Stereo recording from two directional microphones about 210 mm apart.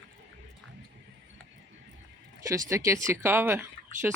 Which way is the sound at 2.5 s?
15° right (ahead or behind).